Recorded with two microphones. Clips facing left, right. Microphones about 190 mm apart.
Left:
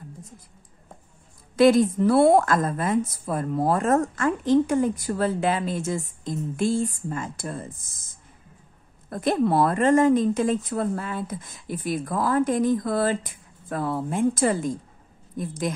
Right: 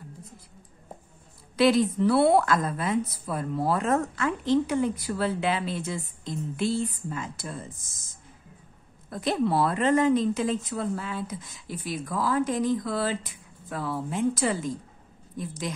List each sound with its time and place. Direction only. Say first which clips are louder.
1.6 s a woman's voice: left 4 dB; 45° left (ahead or behind)
9.1 s a woman's voice: left 4 dB; 50° left (ahead or behind)